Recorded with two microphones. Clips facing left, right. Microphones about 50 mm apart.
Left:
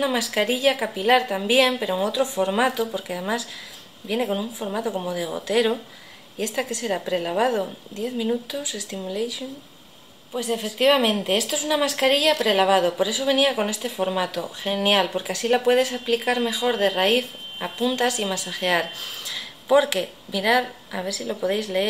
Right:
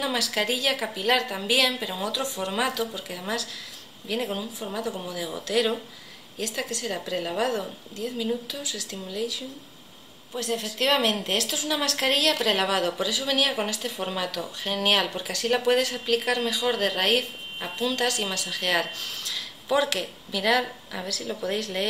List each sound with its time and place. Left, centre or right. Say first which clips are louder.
0.0 s speech: left 4 dB; centre